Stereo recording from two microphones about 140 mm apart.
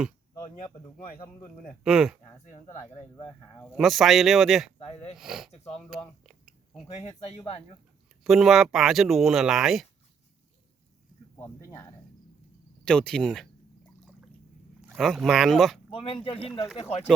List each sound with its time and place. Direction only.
1.8 s speech: 5° right (ahead or behind)
3.2 s speech: 5° left (ahead or behind)
3.8 s speech: centre (ahead or behind)
4.9 s speech: 45° left (ahead or behind)
5.1 s speech: 5° right (ahead or behind)
5.7 s a sound: 5° right (ahead or behind)
6.9 s speech: 50° left (ahead or behind)
8.2 s speech: 5° right (ahead or behind)
11.3 s speech: 15° left (ahead or behind)
12.8 s speech: 5° left (ahead or behind)
14.9 s speech: centre (ahead or behind)
15.9 s speech: 40° left (ahead or behind)